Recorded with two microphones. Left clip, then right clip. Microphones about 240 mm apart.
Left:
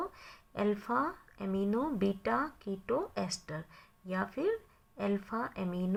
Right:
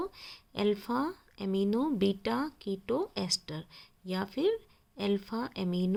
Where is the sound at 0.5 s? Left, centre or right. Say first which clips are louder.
Right 1 dB; right.